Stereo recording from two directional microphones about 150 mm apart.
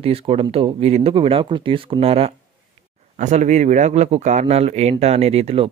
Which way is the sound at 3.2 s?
50° right (ahead or behind).